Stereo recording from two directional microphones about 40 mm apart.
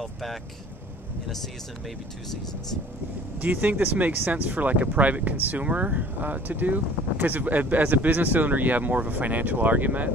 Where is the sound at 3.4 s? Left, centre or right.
Right.